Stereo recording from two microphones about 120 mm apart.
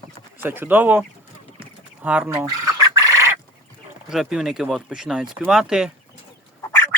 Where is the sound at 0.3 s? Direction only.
15° right (ahead or behind).